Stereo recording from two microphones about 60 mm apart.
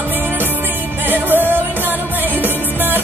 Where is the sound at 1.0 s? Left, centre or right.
Right.